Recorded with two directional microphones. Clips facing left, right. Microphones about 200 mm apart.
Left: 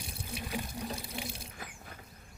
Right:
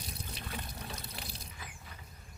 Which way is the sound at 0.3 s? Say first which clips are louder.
Left 9 dB; 10° left (ahead or behind).